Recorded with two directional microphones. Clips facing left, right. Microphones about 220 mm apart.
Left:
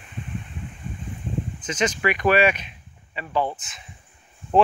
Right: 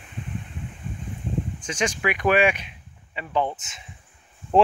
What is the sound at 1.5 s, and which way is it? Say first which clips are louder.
Speech: left 5 dB; 10° right (ahead or behind).